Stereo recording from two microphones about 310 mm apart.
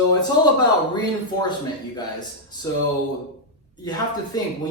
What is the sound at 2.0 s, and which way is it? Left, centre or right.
Speech, centre.